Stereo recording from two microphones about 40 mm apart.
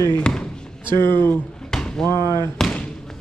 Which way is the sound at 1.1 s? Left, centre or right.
Left.